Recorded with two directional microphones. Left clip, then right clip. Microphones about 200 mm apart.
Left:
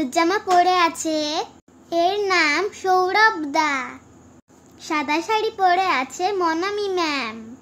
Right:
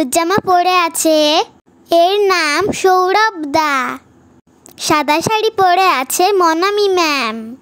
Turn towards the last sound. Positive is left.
turn(degrees=-45)  # may be behind; listen again after turning